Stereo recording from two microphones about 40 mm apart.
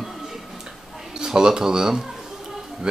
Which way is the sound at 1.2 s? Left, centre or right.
Centre.